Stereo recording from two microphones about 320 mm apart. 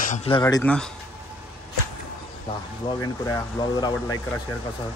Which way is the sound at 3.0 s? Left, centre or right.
Centre.